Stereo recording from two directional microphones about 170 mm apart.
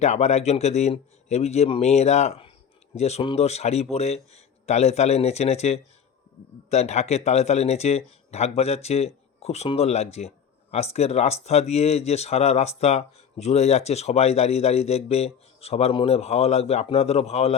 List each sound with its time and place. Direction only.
0.0 s speech: 40° left (ahead or behind)